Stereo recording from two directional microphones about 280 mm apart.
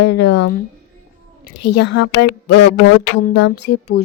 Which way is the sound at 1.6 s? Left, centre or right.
Left.